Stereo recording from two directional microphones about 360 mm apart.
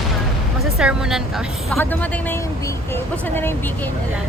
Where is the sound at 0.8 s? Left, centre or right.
Centre.